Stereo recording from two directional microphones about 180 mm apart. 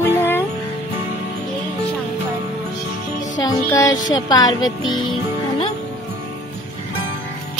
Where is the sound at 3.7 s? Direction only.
20° left (ahead or behind).